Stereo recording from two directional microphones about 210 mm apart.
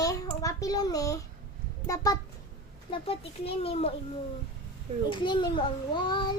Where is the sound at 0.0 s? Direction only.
15° left (ahead or behind).